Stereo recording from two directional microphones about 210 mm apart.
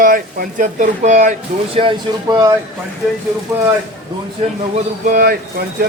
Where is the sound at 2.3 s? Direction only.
15° right (ahead or behind).